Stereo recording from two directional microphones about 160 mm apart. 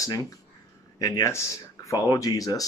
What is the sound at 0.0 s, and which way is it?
Speech, 25° left (ahead or behind).